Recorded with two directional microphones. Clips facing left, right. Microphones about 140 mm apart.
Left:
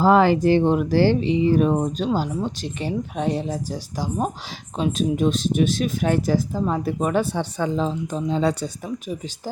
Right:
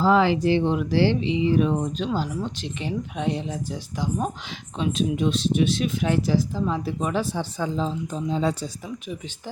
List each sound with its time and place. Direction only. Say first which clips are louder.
0.0 s speech: left 3 dB; 50° left (ahead or behind); by 8.7 s 65° left (ahead or behind)